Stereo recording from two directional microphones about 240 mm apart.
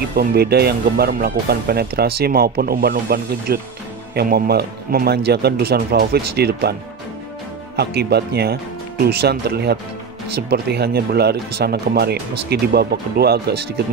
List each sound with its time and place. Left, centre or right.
0.1 s speech: right